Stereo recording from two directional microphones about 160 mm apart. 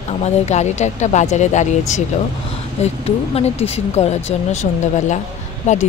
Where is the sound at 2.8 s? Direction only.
40° left (ahead or behind).